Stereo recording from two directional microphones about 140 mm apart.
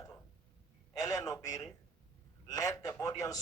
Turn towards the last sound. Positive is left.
turn(degrees=25)  # may be behind; listen again after turning